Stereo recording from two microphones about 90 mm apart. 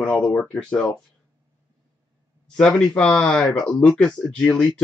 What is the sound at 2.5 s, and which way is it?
Speech, 10° left (ahead or behind).